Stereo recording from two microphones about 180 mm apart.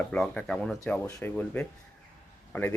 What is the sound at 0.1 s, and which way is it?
A man's voice, 5° left (ahead or behind).